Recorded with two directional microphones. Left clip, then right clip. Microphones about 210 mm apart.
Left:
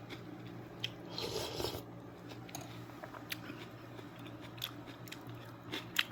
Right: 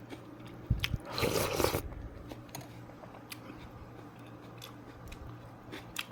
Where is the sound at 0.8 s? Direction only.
60° right (ahead or behind).